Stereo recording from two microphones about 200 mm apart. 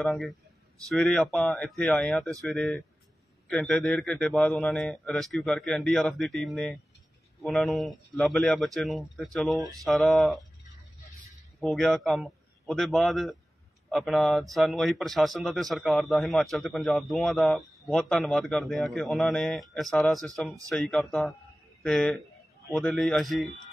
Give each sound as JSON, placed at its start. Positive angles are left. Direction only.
{"t": 0.0, "sound": "speech", "side_deg": 0}
{"t": 11.6, "sound": "speech", "side_deg": 0}